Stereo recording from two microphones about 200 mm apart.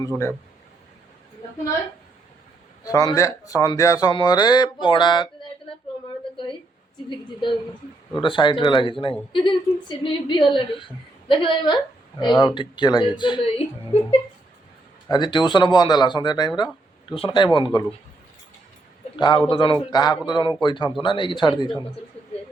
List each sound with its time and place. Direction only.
2.8 s speech: 20° left (ahead or behind)
6.3 s a sound: 25° left (ahead or behind)
7.1 s speech: 25° left (ahead or behind)
15.1 s speech: 20° left (ahead or behind)
19.1 s a man's voice: 20° left (ahead or behind)